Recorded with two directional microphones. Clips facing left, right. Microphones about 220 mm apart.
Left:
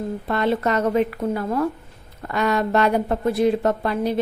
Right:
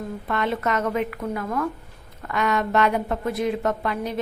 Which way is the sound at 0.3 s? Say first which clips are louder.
Left 4 dB; 35° left (ahead or behind).